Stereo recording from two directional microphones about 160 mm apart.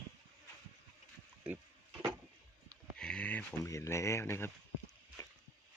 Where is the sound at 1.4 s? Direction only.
10° right (ahead or behind).